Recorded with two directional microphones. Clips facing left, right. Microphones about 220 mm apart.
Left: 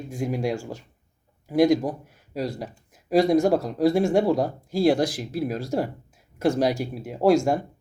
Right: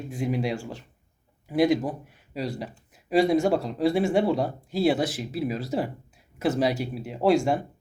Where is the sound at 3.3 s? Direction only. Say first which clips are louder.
Left 3 dB; 45° left (ahead or behind).